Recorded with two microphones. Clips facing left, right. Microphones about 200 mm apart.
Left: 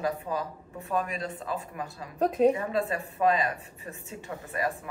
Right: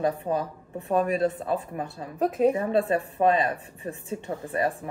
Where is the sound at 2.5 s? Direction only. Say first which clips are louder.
Right 6 dB; 35° right (ahead or behind).